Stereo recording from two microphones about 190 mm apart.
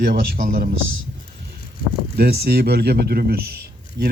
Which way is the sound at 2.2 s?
55° right (ahead or behind).